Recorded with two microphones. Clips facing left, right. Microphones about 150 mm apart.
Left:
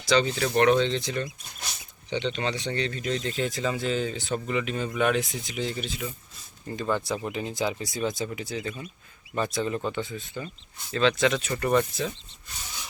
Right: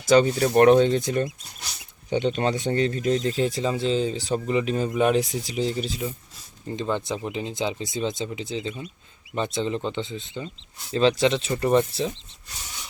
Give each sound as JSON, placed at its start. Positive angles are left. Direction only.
{"t": 0.1, "sound": "speech", "side_deg": -45}
{"t": 6.7, "sound": "speech", "side_deg": -20}